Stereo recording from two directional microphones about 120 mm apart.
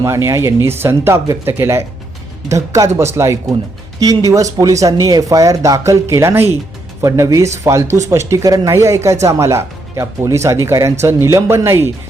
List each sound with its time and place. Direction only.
0.0 s speech: 25° right (ahead or behind)